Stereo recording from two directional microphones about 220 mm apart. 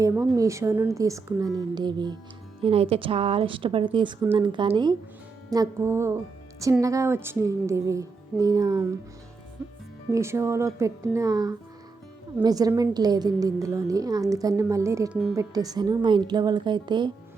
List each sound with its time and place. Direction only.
0.0 s a woman's voice: 15° right (ahead or behind)
10.1 s a woman's voice: 10° right (ahead or behind)